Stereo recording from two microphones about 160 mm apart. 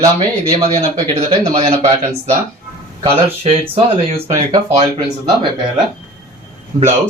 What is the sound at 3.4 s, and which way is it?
Speech, 35° right (ahead or behind).